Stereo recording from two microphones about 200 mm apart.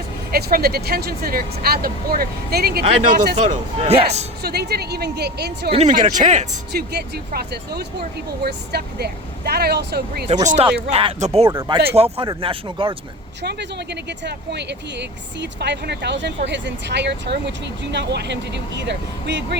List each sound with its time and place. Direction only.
0.3 s speech: 50° right (ahead or behind)
3.3 s speech: 35° right (ahead or behind)
4.4 s speech: 55° right (ahead or behind)
5.7 s speech: 35° right (ahead or behind)
6.7 s speech: 55° right (ahead or behind)
10.2 s speech: 35° right (ahead or behind)
11.4 s speech: 15° right (ahead or behind)
11.9 s speech: 30° right (ahead or behind)
13.4 s speech: 55° right (ahead or behind)